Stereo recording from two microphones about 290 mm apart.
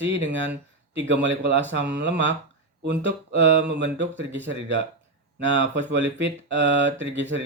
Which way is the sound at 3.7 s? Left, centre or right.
Right.